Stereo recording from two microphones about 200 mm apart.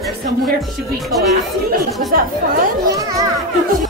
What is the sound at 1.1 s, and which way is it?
Speech, centre (ahead or behind).